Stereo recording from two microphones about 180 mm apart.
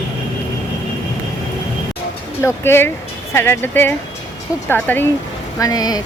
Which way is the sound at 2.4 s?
15° left (ahead or behind).